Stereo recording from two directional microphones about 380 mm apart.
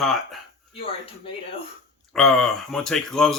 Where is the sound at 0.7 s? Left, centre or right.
Centre.